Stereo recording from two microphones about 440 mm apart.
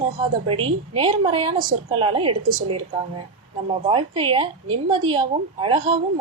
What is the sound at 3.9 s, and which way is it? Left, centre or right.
A woman's voice, centre.